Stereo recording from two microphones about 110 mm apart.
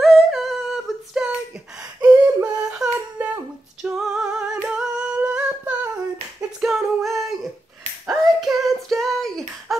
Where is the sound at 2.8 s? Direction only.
35° right (ahead or behind).